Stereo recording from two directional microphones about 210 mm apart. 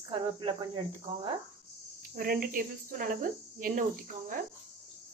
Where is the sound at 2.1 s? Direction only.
45° right (ahead or behind).